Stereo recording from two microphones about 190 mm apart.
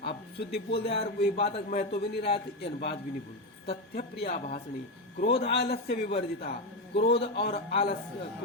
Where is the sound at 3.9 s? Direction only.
50° left (ahead or behind).